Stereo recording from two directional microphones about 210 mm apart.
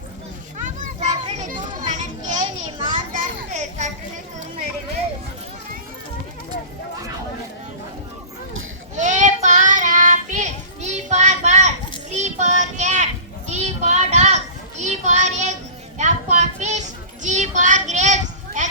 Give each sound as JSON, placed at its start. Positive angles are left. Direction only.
{"t": 0.6, "sound": "children playing", "side_deg": -35}
{"t": 2.4, "sound": "children playing", "side_deg": -20}
{"t": 3.1, "sound": "a sound", "side_deg": -35}
{"t": 9.0, "sound": "child singing", "side_deg": -35}
{"t": 13.5, "sound": "children playing", "side_deg": -35}
{"t": 16.0, "sound": "a sound", "side_deg": -35}